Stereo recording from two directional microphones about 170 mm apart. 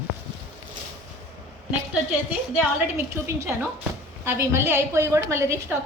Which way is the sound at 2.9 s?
15° right (ahead or behind).